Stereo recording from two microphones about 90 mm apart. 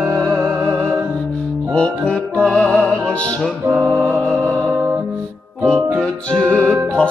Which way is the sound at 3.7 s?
25° right (ahead or behind).